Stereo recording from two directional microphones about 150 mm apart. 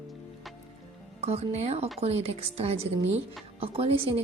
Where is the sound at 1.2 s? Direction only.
45° right (ahead or behind).